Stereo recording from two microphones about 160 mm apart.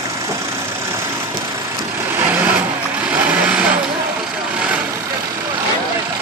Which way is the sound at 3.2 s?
10° right (ahead or behind).